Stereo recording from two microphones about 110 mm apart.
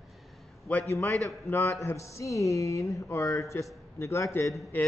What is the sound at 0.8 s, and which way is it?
Speech, 25° left (ahead or behind).